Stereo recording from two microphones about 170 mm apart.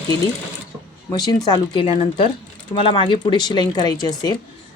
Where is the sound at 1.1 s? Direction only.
25° left (ahead or behind).